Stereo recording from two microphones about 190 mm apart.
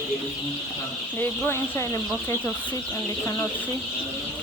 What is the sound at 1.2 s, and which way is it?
Speech, 10° left (ahead or behind).